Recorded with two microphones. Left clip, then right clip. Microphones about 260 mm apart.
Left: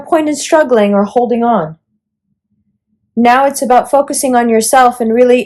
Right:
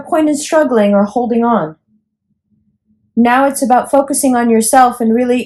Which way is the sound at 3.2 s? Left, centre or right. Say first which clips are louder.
Left 3 dB; left.